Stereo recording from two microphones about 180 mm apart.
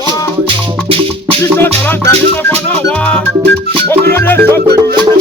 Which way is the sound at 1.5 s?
10° left (ahead or behind).